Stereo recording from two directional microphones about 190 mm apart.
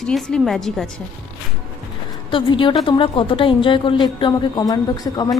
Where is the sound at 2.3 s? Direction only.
25° left (ahead or behind).